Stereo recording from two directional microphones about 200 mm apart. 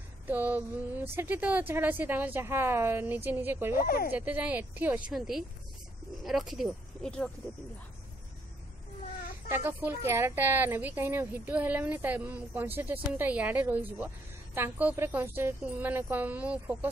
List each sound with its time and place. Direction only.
0.3 s speech: 10° right (ahead or behind)
3.7 s speech: 45° left (ahead or behind)
4.1 s speech: 10° right (ahead or behind)
9.5 s speech: 10° right (ahead or behind)